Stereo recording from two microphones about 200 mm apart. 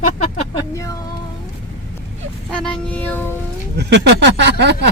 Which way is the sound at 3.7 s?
60° right (ahead or behind).